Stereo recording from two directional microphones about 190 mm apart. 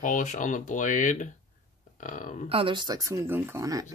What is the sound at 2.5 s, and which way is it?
Speech, 30° right (ahead or behind).